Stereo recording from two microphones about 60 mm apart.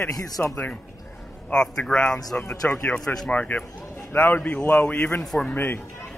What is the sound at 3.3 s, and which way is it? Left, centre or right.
Speech, left.